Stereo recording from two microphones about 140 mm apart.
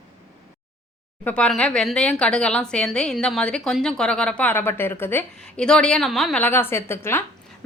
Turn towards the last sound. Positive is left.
turn(degrees=15)  # may be behind; listen again after turning